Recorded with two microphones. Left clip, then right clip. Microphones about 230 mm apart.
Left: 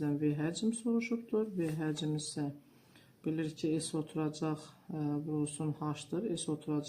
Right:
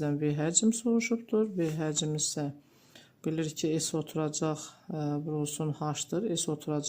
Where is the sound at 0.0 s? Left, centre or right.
Right.